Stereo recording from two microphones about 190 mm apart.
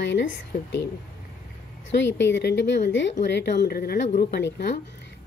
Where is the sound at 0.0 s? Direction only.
70° left (ahead or behind).